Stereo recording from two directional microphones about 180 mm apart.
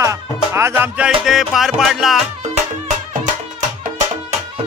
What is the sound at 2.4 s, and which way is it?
Music, 40° right (ahead or behind).